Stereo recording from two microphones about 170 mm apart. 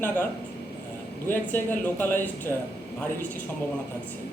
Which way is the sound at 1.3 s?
10° left (ahead or behind).